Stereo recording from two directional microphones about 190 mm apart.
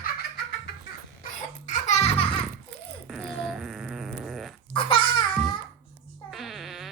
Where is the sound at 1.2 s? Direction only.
40° left (ahead or behind).